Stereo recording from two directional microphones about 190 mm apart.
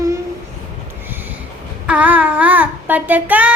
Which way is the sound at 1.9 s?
10° right (ahead or behind).